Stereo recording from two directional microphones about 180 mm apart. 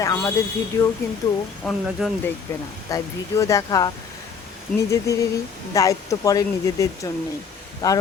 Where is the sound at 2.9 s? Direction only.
15° left (ahead or behind).